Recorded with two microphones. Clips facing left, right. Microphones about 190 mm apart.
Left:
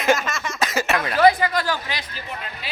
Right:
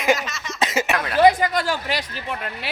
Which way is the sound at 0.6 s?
25° right (ahead or behind).